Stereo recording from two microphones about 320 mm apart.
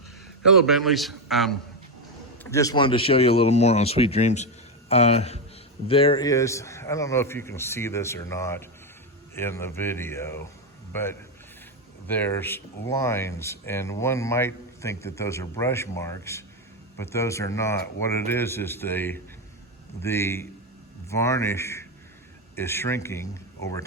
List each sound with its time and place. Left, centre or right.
0.5 s a man's voice: centre